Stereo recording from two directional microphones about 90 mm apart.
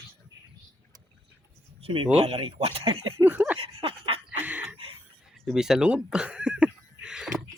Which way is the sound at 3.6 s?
90° right.